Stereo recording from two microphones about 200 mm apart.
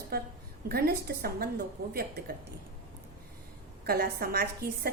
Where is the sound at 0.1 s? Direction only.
50° right (ahead or behind).